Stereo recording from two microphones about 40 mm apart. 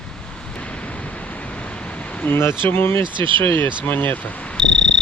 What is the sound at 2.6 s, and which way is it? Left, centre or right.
Speech, left.